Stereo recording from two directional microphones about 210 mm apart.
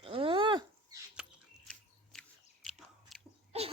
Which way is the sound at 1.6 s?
5° left (ahead or behind).